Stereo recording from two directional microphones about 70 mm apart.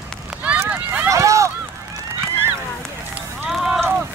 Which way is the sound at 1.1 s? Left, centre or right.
Right.